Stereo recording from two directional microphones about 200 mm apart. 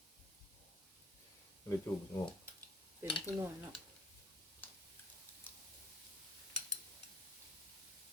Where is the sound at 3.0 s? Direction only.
25° left (ahead or behind).